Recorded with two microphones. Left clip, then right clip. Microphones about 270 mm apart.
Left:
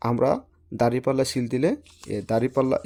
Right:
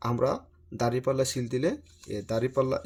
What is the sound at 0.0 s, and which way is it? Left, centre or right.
Speech, left.